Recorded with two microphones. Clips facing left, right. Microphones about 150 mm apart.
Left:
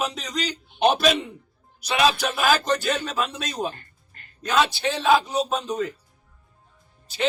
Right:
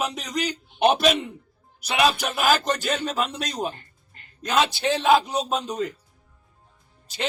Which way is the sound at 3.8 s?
20° right (ahead or behind).